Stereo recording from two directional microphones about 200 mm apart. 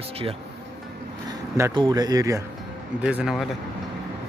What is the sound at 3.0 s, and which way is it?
Speech, 5° right (ahead or behind).